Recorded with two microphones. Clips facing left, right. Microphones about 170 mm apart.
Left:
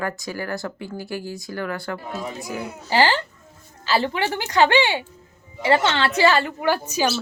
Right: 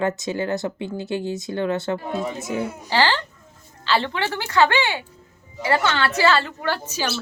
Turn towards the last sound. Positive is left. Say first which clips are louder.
# left 4 dB
turn(degrees=15)  # may be behind; listen again after turning